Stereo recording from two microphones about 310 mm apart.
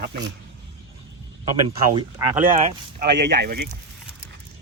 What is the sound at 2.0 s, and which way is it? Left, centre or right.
Speech, centre.